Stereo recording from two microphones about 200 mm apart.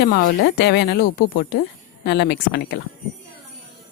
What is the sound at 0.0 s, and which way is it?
Speech, 60° left (ahead or behind).